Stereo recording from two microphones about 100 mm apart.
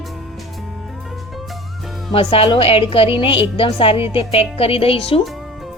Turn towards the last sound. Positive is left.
turn(degrees=70)  # may be behind; listen again after turning